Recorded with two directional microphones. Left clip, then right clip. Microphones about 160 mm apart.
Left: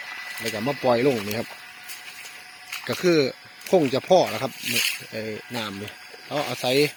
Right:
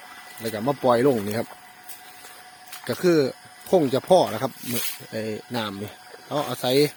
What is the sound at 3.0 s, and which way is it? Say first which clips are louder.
Speech: even; 10° right (ahead or behind).